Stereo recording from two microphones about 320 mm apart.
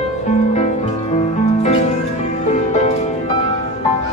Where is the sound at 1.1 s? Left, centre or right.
Centre.